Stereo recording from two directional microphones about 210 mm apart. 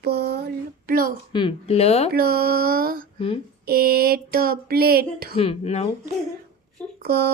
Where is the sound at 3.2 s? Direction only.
25° left (ahead or behind).